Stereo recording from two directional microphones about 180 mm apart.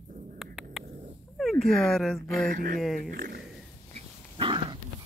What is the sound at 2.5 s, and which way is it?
Speech, 50° right (ahead or behind).